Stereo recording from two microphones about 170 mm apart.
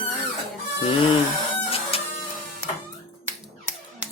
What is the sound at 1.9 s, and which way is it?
Printer, 35° left (ahead or behind).